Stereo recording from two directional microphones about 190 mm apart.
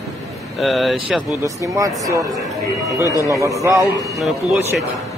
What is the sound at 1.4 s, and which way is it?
Speech, 15° right (ahead or behind).